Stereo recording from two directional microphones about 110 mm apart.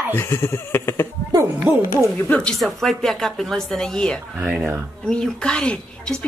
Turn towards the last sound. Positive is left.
turn(degrees=10)  # may be behind; listen again after turning